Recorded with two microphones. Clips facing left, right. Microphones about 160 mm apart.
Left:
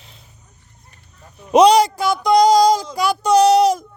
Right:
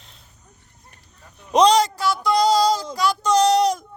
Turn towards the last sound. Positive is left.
turn(degrees=5)  # may be behind; listen again after turning